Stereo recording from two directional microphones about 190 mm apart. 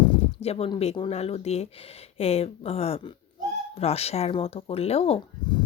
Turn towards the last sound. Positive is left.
turn(degrees=25)  # may be behind; listen again after turning